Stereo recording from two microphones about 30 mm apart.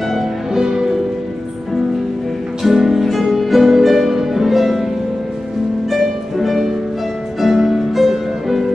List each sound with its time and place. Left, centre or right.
0.5 s music: centre
2.6 s music: centre
3.8 s harp: centre
5.9 s music: centre